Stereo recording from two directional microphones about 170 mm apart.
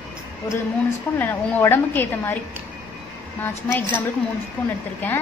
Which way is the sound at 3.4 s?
15° left (ahead or behind).